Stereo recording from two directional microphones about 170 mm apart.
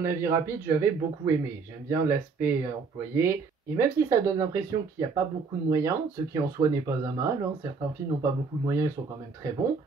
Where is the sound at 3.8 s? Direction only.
20° right (ahead or behind).